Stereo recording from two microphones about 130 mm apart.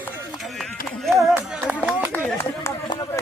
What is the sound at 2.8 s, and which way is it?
Speech, 35° left (ahead or behind).